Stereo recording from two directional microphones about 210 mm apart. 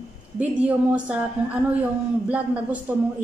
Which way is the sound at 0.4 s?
5° right (ahead or behind).